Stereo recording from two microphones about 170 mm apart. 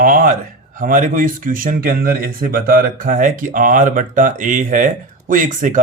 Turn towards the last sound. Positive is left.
turn(degrees=-50)  # may be behind; listen again after turning